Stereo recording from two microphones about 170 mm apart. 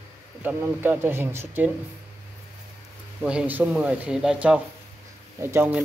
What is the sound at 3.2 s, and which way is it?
Speech, 10° right (ahead or behind).